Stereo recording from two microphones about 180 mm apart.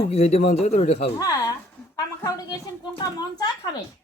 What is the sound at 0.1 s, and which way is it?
Speech, 35° left (ahead or behind).